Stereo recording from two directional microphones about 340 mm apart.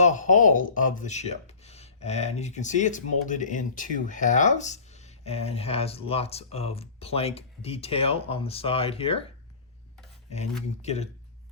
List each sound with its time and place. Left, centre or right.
0.0 s speech: left
10.8 s speech: centre